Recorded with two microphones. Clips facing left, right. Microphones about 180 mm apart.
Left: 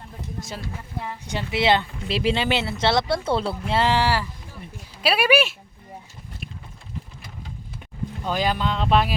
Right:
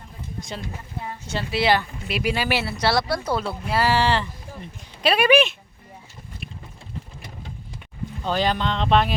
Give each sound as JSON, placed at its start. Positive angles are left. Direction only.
{"t": 1.3, "sound": "speech", "side_deg": 15}
{"t": 8.2, "sound": "speech", "side_deg": 10}